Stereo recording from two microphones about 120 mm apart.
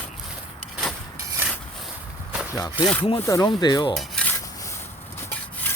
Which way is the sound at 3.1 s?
25° left (ahead or behind).